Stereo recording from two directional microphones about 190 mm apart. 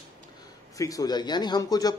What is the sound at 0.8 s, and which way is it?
Speech, 20° left (ahead or behind).